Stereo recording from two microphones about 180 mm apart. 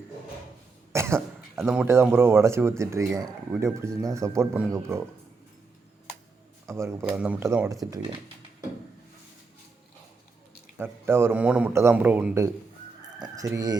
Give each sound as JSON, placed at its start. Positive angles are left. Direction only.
{"t": 0.9, "sound": "speech", "side_deg": -15}
{"t": 6.7, "sound": "speech", "side_deg": -15}
{"t": 10.8, "sound": "speech", "side_deg": -10}